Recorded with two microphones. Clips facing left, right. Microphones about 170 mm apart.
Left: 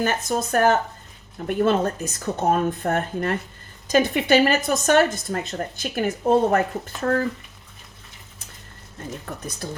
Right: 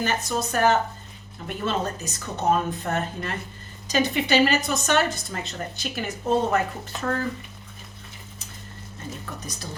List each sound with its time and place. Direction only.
0.0 s speech: 50° left (ahead or behind)
9.2 s speech: 55° left (ahead or behind)